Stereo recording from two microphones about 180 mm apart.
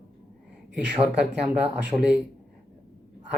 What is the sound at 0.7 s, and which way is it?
Speech, 5° right (ahead or behind).